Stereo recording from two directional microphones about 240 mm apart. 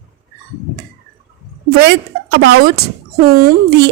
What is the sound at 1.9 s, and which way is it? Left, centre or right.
A woman's voice, right.